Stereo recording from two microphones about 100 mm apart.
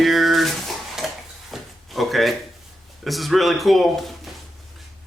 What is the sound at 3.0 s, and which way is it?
Speech, centre (ahead or behind).